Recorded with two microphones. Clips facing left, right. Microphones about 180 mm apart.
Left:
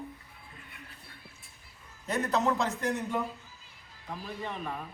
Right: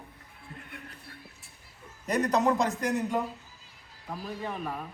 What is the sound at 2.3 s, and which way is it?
Speech, 15° right (ahead or behind).